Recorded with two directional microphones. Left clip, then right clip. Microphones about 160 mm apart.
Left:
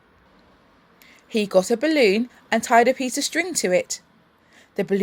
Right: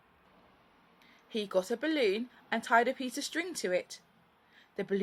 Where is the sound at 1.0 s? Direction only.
35° left (ahead or behind).